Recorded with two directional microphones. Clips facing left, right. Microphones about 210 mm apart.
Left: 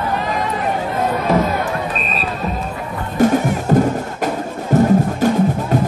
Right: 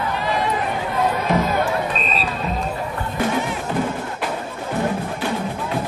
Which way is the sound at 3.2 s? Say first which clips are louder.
Left 9 dB; 40° left (ahead or behind).